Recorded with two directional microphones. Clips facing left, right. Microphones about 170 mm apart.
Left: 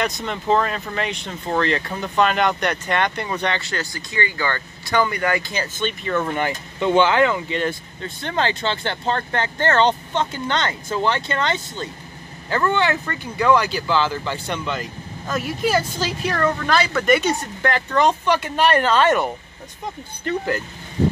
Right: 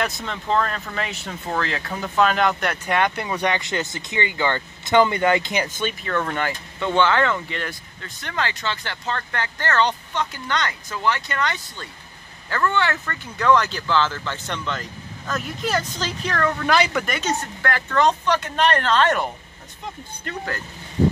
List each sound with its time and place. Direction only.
0.0 s speech: centre (ahead or behind)
6.0 s speech: 10° left (ahead or behind)
16.6 s speech: 15° right (ahead or behind)
17.0 s speech: 5° left (ahead or behind)
17.6 s speech: 20° left (ahead or behind)